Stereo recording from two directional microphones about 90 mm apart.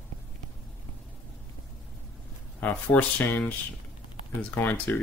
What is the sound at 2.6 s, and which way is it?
Speech, 20° left (ahead or behind).